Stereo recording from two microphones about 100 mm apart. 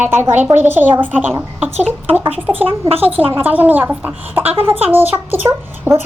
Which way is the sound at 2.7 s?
65° right (ahead or behind).